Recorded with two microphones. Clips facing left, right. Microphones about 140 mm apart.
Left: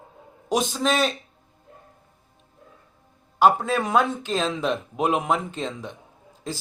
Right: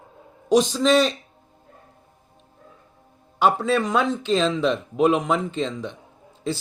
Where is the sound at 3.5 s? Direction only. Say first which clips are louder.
Right 1 dB; 50° left (ahead or behind).